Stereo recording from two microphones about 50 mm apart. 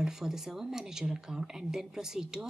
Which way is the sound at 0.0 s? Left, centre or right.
Centre.